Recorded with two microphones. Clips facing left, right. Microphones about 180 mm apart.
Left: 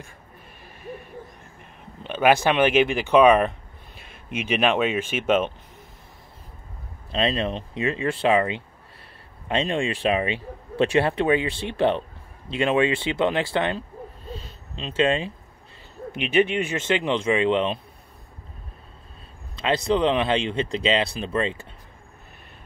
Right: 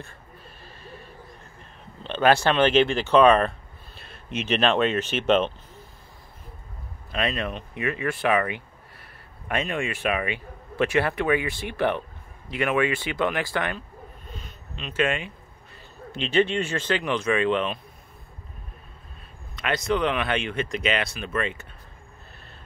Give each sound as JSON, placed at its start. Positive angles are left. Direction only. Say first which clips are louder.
{"t": 1.6, "sound": "speech", "louder": "left 2 dB", "side_deg": 10}
{"t": 7.1, "sound": "speech", "louder": "left 4 dB", "side_deg": 25}
{"t": 16.1, "sound": "speech", "louder": "left 1 dB", "side_deg": 15}
{"t": 19.5, "sound": "speech", "louder": "left 3 dB", "side_deg": 30}